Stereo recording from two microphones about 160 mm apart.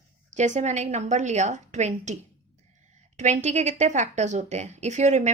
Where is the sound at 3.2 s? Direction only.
45° right (ahead or behind).